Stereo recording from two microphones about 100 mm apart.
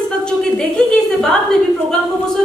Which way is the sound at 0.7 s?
5° left (ahead or behind).